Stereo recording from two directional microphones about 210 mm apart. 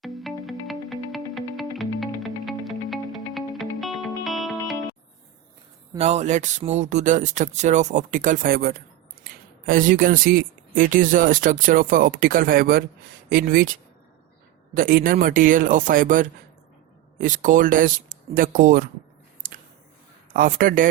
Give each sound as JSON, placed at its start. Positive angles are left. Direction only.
{"t": 0.0, "sound": "music", "side_deg": 0}
{"t": 6.0, "sound": "speech", "side_deg": -30}
{"t": 20.3, "sound": "speech", "side_deg": -40}